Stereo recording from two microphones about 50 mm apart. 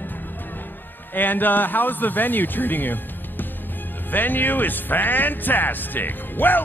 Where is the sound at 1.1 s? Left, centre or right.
Left.